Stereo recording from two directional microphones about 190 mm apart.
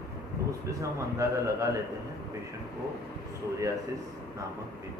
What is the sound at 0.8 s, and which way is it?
Speech, 15° right (ahead or behind).